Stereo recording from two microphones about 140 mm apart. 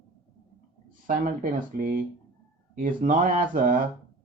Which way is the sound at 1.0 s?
70° right (ahead or behind).